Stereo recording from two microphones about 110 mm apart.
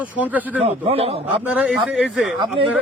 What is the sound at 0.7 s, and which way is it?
Speech, 60° right (ahead or behind).